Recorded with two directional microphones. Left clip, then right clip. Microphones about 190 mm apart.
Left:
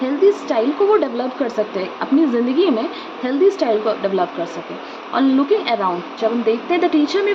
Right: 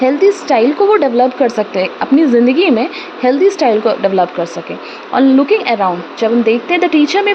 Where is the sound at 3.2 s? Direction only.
45° right (ahead or behind).